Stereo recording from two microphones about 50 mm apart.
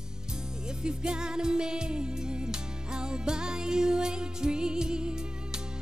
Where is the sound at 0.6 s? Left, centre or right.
Centre.